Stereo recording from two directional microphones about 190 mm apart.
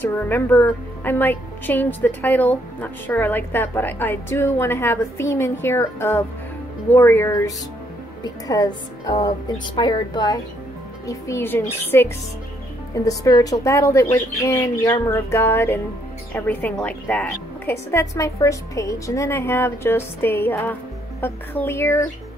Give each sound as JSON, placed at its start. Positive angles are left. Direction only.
{"t": 0.0, "sound": "a woman's voice", "side_deg": 10}